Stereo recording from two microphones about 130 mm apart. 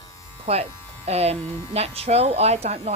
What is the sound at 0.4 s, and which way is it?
Speech, 50° right (ahead or behind).